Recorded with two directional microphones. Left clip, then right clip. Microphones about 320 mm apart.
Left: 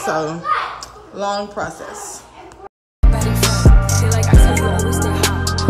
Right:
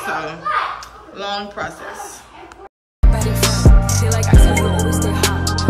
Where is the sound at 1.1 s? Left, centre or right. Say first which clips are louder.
Left 3 dB; centre.